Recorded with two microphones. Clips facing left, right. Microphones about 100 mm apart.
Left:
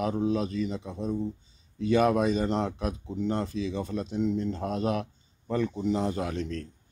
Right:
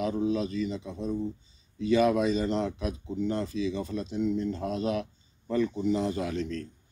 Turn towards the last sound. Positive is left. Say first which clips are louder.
# even
turn(degrees=55)  # may be behind; listen again after turning